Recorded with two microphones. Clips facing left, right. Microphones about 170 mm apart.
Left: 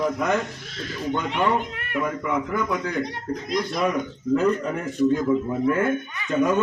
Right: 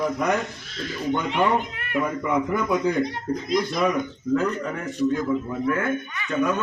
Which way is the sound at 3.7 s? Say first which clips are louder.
Right 1 dB; 10° left (ahead or behind).